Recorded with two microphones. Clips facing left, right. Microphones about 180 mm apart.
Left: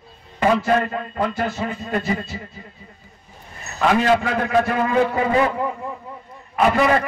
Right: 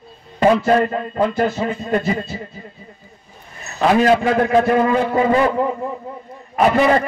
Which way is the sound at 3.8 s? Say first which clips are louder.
Right 3 dB; 30° right (ahead or behind).